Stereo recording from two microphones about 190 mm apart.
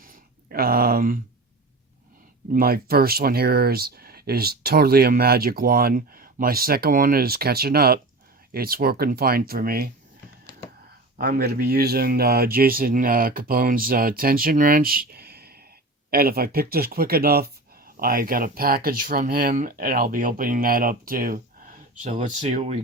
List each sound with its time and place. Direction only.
0.0 s a sound: 45° right (ahead or behind)
2.5 s speech: 50° right (ahead or behind)
11.2 s speech: 55° right (ahead or behind); by 22.8 s 35° right (ahead or behind)